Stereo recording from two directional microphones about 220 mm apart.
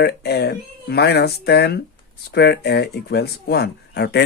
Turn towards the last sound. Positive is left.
turn(degrees=50)  # may be behind; listen again after turning